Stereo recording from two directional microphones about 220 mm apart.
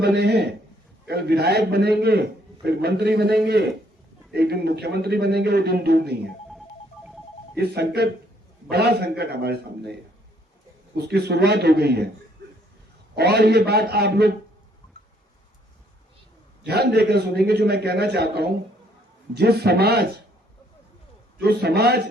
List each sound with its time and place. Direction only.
0.0 s a man's voice: 50° right (ahead or behind)
7.5 s a man's voice: 45° right (ahead or behind)
10.9 s a man's voice: 45° right (ahead or behind)
13.1 s a man's voice: 45° right (ahead or behind)
16.6 s a man's voice: 50° right (ahead or behind)
21.3 s a man's voice: 45° right (ahead or behind)